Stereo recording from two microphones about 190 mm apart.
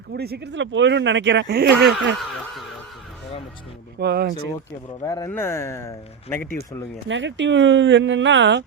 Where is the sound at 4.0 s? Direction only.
60° right (ahead or behind).